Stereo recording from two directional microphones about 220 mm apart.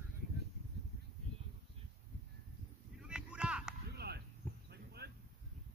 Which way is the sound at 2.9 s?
5° right (ahead or behind).